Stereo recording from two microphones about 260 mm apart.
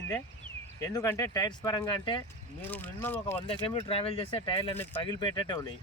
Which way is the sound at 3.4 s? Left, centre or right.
Centre.